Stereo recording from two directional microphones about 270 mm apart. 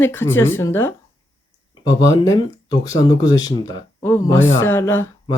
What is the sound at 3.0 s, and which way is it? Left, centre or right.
Speech, centre.